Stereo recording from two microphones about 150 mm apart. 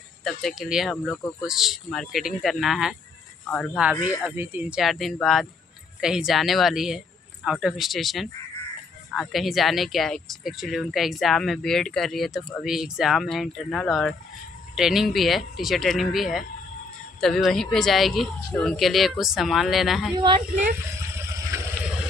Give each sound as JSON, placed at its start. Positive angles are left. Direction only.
{"t": 0.2, "sound": "speech", "side_deg": 0}
{"t": 20.2, "sound": "speech", "side_deg": -30}